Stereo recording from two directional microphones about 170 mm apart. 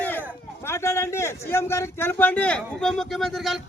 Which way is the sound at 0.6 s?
15° left (ahead or behind).